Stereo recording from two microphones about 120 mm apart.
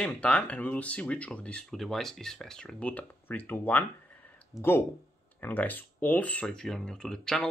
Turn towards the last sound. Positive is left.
turn(degrees=5)  # may be behind; listen again after turning